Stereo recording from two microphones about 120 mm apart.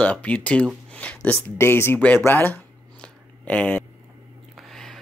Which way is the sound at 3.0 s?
10° left (ahead or behind).